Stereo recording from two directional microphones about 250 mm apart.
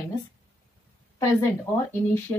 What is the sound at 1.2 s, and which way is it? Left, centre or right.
Speech, centre.